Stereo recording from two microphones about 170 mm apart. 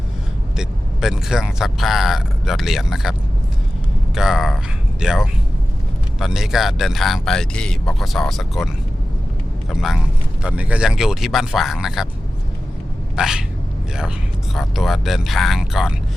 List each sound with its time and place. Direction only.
0.5 s speech: 5° right (ahead or behind)
13.1 s a sound: 5° right (ahead or behind)
14.5 s speech: centre (ahead or behind)